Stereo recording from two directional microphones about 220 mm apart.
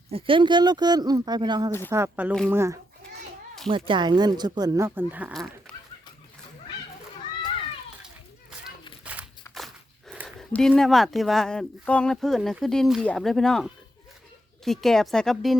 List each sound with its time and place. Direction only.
0.1 s speech: 25° right (ahead or behind)
3.7 s speech: 25° right (ahead or behind); by 5.7 s centre (ahead or behind)
8.0 s children playing: 5° right (ahead or behind)
9.6 s speech: centre (ahead or behind)